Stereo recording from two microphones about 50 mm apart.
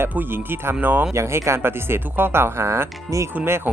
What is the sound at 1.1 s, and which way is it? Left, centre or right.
Speech, right.